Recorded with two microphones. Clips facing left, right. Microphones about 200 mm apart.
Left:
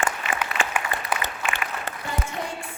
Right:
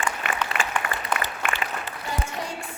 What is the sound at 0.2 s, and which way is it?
Applause, 60° right (ahead or behind).